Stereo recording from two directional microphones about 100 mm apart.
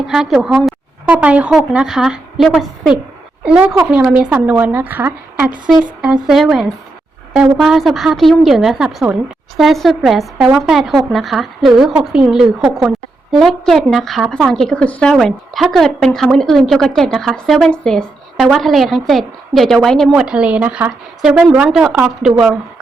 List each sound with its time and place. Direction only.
0.1 s a woman's voice: 5° right (ahead or behind)
1.0 s a woman's voice: 15° right (ahead or behind)
6.2 s a woman's voice: centre (ahead or behind)
20.1 s a woman's voice: 10° right (ahead or behind)